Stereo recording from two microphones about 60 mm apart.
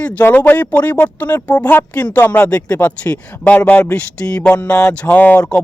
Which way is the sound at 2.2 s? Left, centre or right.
Left.